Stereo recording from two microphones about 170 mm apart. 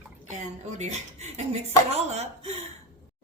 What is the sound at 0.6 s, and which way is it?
Speech, 40° right (ahead or behind).